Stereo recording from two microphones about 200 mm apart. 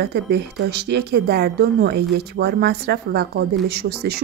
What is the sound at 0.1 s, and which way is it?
Speech, 55° right (ahead or behind).